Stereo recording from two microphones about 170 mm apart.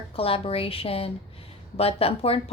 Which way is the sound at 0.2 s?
35° left (ahead or behind).